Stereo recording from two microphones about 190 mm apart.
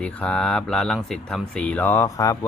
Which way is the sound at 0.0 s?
5° left (ahead or behind).